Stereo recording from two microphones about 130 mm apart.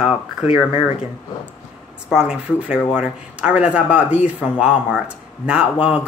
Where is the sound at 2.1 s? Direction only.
5° right (ahead or behind).